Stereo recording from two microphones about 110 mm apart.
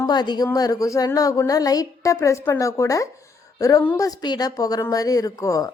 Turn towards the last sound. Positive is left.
turn(degrees=30)  # may be behind; listen again after turning